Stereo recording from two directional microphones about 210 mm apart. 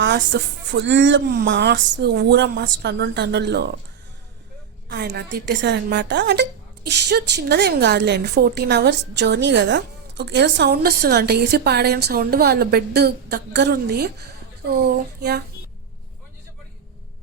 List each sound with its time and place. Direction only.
0.0 s speech: 55° right (ahead or behind)
4.9 s a woman's voice: 55° right (ahead or behind)